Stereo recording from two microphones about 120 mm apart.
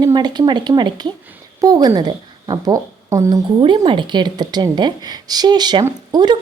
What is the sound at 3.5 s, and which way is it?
A woman's voice, 40° right (ahead or behind).